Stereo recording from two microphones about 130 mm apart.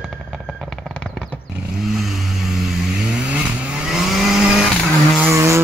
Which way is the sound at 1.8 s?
5° right (ahead or behind).